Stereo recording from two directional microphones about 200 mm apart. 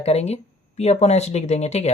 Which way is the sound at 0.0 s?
30° left (ahead or behind).